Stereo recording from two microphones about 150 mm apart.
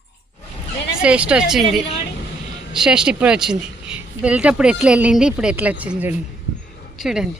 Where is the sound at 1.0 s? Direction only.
5° right (ahead or behind).